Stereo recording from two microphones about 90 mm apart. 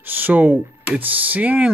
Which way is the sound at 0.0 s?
20° right (ahead or behind).